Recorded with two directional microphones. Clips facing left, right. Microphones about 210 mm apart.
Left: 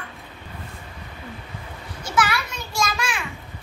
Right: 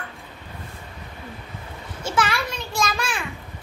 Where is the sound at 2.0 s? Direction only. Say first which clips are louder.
Even; 25° right (ahead or behind).